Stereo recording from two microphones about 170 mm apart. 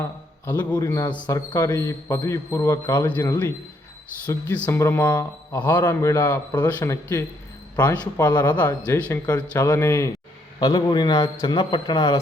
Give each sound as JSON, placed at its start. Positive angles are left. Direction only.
{"t": 0.8, "sound": "a man's voice", "side_deg": 20}
{"t": 8.3, "sound": "a man's voice", "side_deg": 25}
{"t": 8.9, "sound": "a man's voice", "side_deg": 10}